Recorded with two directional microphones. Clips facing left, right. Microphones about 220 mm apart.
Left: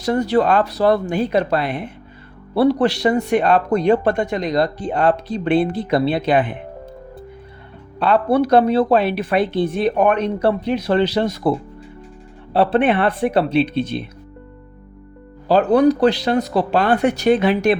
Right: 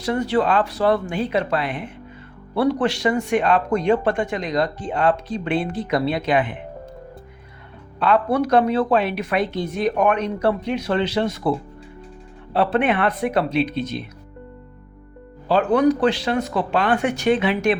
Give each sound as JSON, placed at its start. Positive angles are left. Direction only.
{"t": 0.0, "sound": "speech", "side_deg": 40}
{"t": 7.9, "sound": "speech", "side_deg": 35}
{"t": 12.5, "sound": "speech", "side_deg": 30}
{"t": 15.4, "sound": "speech", "side_deg": 40}